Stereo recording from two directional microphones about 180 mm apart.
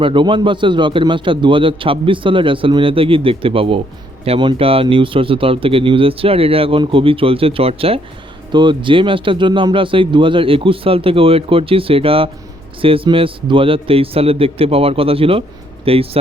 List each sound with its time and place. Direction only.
0.0 s a man's voice: 30° right (ahead or behind)